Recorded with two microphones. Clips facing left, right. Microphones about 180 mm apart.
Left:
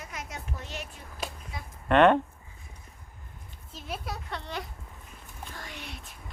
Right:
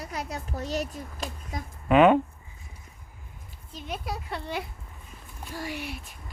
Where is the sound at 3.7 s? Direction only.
5° left (ahead or behind).